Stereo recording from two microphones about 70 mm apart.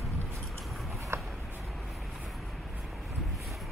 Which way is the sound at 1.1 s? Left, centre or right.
Right.